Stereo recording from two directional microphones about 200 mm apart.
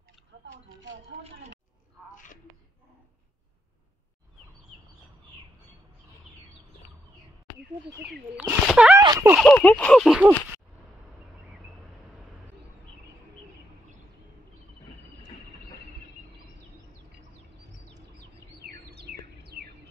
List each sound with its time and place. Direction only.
8.0 s speech: 5° right (ahead or behind)
9.4 s speech: 5° left (ahead or behind)
18.6 s bird: 55° right (ahead or behind)